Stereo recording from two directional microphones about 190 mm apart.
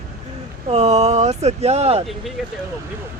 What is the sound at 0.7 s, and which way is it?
Speech, 35° right (ahead or behind).